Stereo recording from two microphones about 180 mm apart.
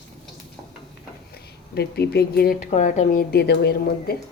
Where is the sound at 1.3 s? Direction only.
65° left (ahead or behind).